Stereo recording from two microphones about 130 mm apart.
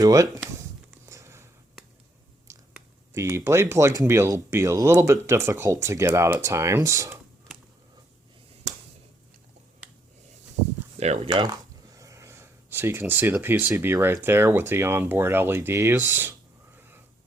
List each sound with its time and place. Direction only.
0.0 s speech: 25° right (ahead or behind)
1.0 s sniff: 20° right (ahead or behind)
2.5 s biting: 20° right (ahead or behind)
3.1 s speech: 20° right (ahead or behind)
10.9 s speech: 55° right (ahead or behind)
11.3 s speech: 30° right (ahead or behind); by 16.3 s 15° right (ahead or behind)
16.7 s a sound: 15° right (ahead or behind)